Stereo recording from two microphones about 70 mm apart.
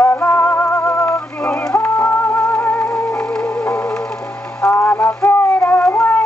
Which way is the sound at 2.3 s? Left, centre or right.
Centre.